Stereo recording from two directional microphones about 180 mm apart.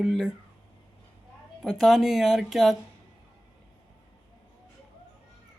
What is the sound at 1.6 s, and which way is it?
Speech, centre (ahead or behind).